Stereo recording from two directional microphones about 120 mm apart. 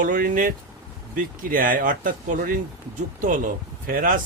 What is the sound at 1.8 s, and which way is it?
Speech, 90° right.